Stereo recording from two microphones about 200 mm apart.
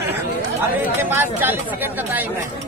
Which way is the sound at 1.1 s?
10° right (ahead or behind).